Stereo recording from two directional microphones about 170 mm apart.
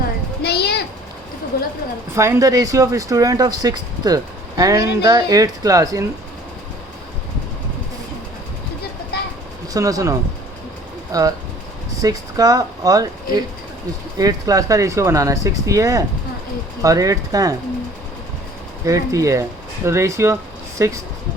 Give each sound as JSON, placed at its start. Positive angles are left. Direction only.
{"t": 0.4, "sound": "a sound", "side_deg": 70}
{"t": 2.1, "sound": "speech", "side_deg": -15}
{"t": 9.7, "sound": "speech", "side_deg": -20}
{"t": 18.9, "sound": "speech", "side_deg": -20}